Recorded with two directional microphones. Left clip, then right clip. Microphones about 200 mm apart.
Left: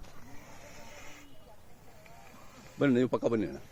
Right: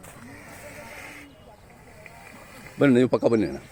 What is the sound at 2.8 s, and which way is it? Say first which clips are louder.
Speech: right 8 dB; centre (ahead or behind).